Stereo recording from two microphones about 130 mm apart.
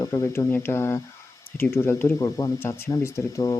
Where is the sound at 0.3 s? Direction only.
15° left (ahead or behind).